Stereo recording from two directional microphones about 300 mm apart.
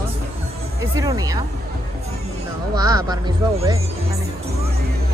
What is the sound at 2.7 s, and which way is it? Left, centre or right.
A woman's voice, centre.